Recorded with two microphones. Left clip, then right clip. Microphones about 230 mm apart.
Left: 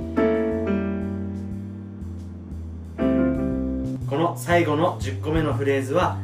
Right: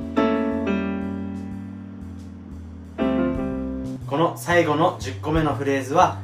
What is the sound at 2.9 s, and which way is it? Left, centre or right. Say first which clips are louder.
Music: left 1 dB; centre.